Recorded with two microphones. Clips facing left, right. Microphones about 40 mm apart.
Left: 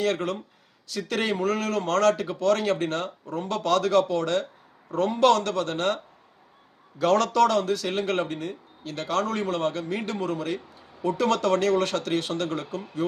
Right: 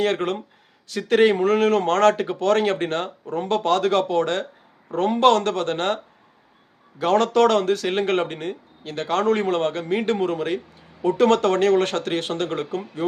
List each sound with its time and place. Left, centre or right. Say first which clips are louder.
0.0 s speech: right 4 dB; right
7.0 s a man's voice: right 2 dB; right
7.3 s speech: right 4 dB; right